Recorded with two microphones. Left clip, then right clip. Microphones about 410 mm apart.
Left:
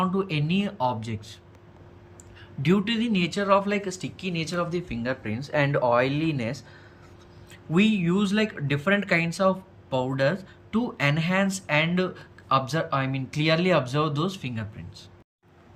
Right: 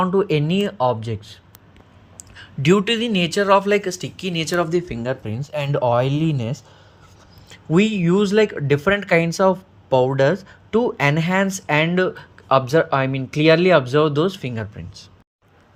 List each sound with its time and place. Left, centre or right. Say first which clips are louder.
0.0 s speech: right 9 dB; centre
5.2 s speech: left 1 dB; right